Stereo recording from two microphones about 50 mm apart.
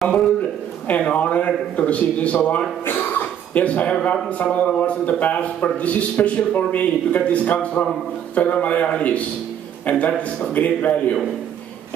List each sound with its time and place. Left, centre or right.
0.8 s a man's voice: left
2.8 s a sound: left
4.3 s a man's voice: left